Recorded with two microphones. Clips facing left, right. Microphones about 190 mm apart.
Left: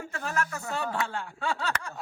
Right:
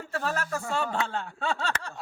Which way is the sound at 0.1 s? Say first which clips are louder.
Right 3 dB; 35° right (ahead or behind).